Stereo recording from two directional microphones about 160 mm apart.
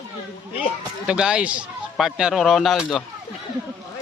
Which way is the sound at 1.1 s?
5° right (ahead or behind).